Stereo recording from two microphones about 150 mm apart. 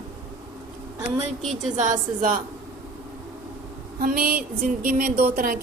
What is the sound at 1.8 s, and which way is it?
Speech, 60° right (ahead or behind).